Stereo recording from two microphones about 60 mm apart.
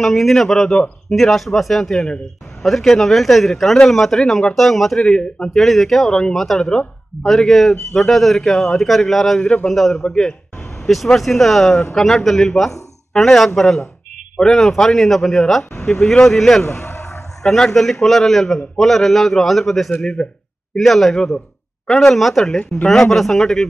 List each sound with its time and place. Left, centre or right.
0.0 s a man's voice: centre
5.0 s speech: centre
5.6 s a man's voice: centre
9.4 s speech: centre
9.8 s a man's voice: centre
16.8 s a sound: left
17.4 s a man's voice: centre